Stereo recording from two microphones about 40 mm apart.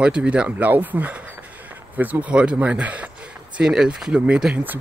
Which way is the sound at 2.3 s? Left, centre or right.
Right.